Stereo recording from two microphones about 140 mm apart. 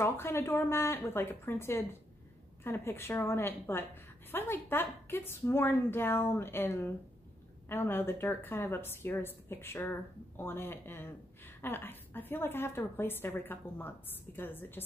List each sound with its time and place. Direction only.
0.0 s a woman's voice: 20° left (ahead or behind)